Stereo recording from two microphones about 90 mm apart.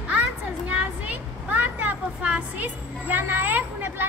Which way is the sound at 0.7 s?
15° right (ahead or behind).